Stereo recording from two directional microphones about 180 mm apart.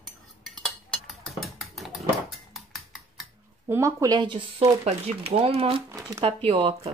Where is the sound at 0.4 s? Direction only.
Centre (ahead or behind).